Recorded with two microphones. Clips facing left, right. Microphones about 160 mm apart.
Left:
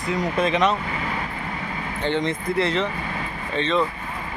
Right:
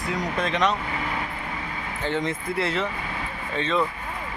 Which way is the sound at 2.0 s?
5° right (ahead or behind).